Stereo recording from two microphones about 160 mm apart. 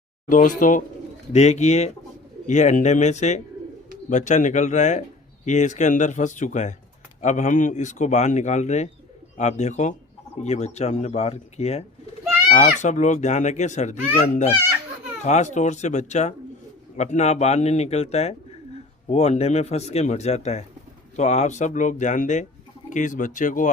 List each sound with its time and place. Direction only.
0.3 s a child's voice: 55° left (ahead or behind)